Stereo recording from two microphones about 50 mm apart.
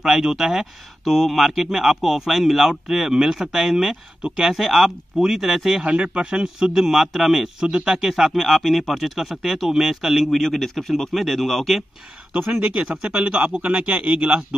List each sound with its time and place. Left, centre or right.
0.0 s speech: centre
6.1 s speech: centre
12.5 s speech: right